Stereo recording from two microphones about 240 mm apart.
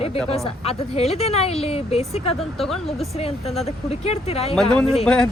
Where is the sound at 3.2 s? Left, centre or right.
Left.